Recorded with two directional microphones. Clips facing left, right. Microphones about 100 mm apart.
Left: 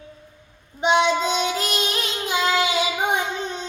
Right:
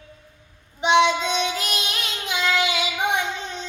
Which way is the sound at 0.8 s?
35° left (ahead or behind).